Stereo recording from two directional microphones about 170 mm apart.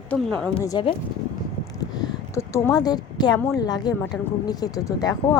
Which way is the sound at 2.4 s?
15° left (ahead or behind).